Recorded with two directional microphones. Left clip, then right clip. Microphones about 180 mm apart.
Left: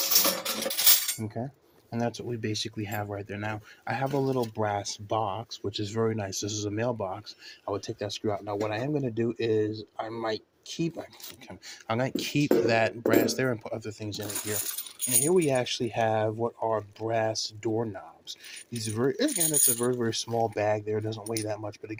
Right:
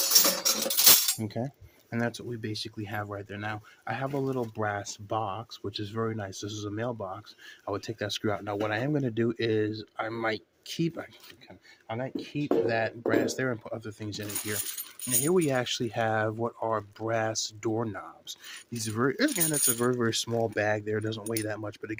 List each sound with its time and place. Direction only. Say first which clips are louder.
0.0 s music: right 2 dB; 40° right (ahead or behind)
1.2 s speech: right 1 dB; 20° right (ahead or behind)
1.9 s speech: left 1 dB; 5° right (ahead or behind)
2.3 s speech: left 4 dB; 15° left (ahead or behind)
7.6 s speech: left 1 dB; 15° right (ahead or behind)
11.9 s speech: left 6 dB; 30° left (ahead or behind)
12.6 s speech: left 3 dB; 15° left (ahead or behind)
14.1 s speech: left 1 dB; 15° right (ahead or behind)